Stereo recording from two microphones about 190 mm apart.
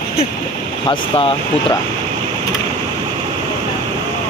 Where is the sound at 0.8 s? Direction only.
30° left (ahead or behind).